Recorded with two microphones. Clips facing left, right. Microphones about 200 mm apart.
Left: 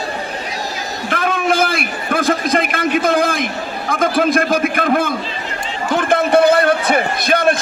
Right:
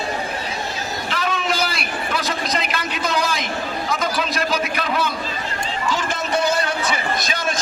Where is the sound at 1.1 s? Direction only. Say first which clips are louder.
Left 7 dB; 55° left (ahead or behind).